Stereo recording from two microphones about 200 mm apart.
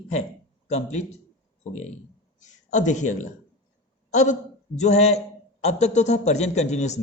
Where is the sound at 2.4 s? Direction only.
40° left (ahead or behind).